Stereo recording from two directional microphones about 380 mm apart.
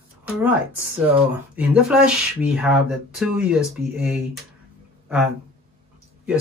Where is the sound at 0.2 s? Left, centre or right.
Centre.